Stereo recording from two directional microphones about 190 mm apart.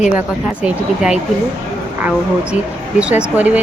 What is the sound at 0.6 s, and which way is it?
Speech, 5° right (ahead or behind).